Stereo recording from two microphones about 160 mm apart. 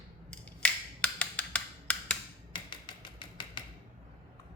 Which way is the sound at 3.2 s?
30° left (ahead or behind).